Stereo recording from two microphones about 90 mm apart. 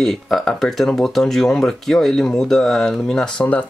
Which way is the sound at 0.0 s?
5° left (ahead or behind).